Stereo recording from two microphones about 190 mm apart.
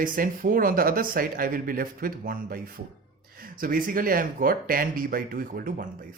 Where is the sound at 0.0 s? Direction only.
45° right (ahead or behind).